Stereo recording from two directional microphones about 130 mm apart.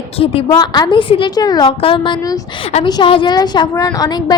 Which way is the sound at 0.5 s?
30° left (ahead or behind).